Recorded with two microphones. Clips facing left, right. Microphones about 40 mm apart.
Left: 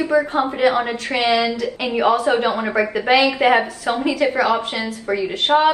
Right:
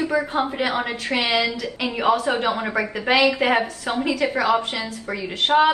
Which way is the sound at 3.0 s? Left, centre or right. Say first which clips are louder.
Left 2 dB; centre.